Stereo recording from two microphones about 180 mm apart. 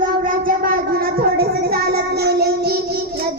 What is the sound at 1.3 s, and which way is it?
Child singing, 60° right (ahead or behind).